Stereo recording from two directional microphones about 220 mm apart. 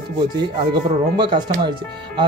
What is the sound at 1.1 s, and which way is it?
Speech, 20° right (ahead or behind).